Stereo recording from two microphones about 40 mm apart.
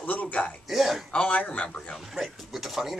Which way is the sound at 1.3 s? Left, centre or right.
Left.